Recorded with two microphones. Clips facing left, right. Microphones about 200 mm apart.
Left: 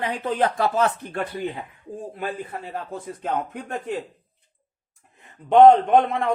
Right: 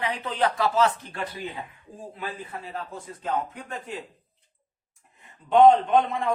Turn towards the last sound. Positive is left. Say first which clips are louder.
# left 3 dB
turn(degrees=60)  # may be behind; listen again after turning